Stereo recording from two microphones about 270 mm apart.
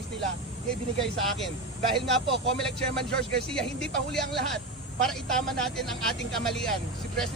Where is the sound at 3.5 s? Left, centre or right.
Centre.